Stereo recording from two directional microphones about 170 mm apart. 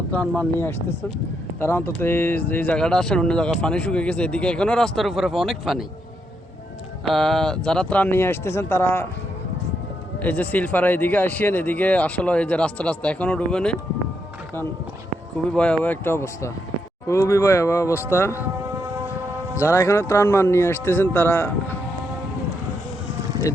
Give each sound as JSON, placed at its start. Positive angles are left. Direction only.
{"t": 0.1, "sound": "speech", "side_deg": 10}
{"t": 7.0, "sound": "speech", "side_deg": 0}
{"t": 10.2, "sound": "speech", "side_deg": 10}
{"t": 15.4, "sound": "speech", "side_deg": 5}
{"t": 19.5, "sound": "speech", "side_deg": 15}